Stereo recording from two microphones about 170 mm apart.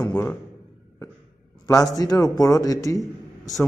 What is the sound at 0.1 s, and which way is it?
Speech, 10° left (ahead or behind).